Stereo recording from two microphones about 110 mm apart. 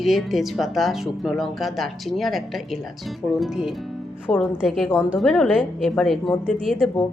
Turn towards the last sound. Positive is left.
turn(degrees=0)  # may be behind; listen again after turning